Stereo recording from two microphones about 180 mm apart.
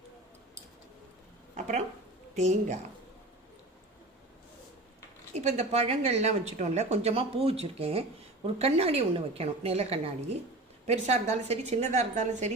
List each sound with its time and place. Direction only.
1.5 s a woman's voice: 40° right (ahead or behind)
5.3 s a woman's voice: 40° right (ahead or behind)